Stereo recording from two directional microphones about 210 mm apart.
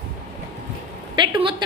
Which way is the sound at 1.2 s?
25° right (ahead or behind).